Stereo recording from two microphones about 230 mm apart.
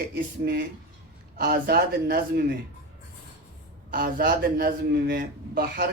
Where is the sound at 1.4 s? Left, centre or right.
Right.